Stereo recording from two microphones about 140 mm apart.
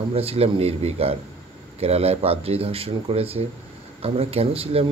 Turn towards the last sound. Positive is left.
turn(degrees=-45)  # may be behind; listen again after turning